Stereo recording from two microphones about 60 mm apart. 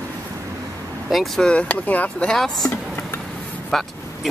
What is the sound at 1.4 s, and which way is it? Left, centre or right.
Speech, centre.